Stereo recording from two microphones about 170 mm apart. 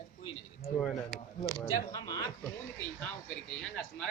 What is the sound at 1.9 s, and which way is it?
Speech, 20° left (ahead or behind).